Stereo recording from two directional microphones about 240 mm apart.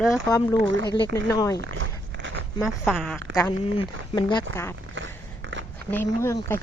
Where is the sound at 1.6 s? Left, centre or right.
Right.